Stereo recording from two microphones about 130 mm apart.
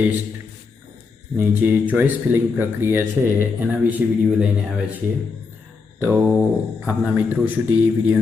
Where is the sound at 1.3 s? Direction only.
10° right (ahead or behind).